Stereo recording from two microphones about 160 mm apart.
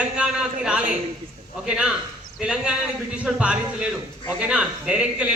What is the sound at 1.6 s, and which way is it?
A man's voice, 5° right (ahead or behind).